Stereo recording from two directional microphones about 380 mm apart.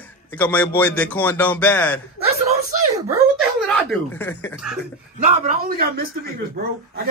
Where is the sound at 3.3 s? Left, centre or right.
Centre.